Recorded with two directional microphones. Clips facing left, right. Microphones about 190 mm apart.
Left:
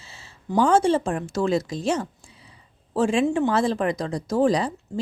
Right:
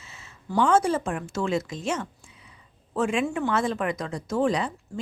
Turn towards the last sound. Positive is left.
turn(degrees=35)  # may be behind; listen again after turning